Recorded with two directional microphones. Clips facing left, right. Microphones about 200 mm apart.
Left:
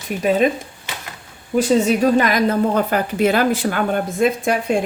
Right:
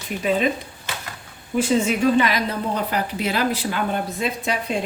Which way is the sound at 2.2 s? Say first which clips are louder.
Left 6 dB; 50° left (ahead or behind).